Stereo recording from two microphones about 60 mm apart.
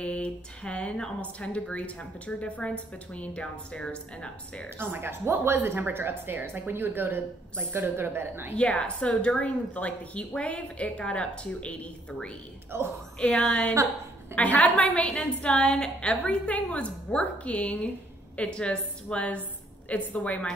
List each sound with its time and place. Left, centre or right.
0.0 s a woman's voice: centre
4.7 s a woman's voice: right
8.5 s a woman's voice: centre
12.7 s a woman's voice: right
13.3 s a woman's voice: centre
14.3 s a woman's voice: left